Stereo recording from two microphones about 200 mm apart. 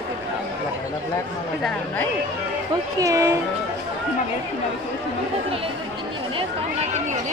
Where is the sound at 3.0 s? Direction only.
15° right (ahead or behind).